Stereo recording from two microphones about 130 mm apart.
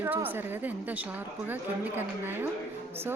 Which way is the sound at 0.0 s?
15° right (ahead or behind).